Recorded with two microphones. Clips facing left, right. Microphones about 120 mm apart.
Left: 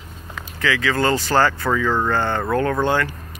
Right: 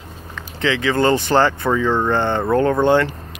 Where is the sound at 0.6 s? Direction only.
25° right (ahead or behind).